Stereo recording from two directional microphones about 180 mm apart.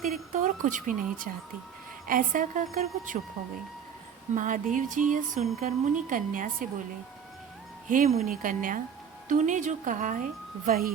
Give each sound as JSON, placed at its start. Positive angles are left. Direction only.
{"t": 0.0, "sound": "a woman's voice", "side_deg": -45}
{"t": 4.4, "sound": "a woman's voice", "side_deg": -45}
{"t": 7.9, "sound": "a woman's voice", "side_deg": -45}